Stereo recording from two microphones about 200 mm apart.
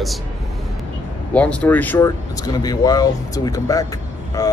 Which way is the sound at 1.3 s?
5° left (ahead or behind).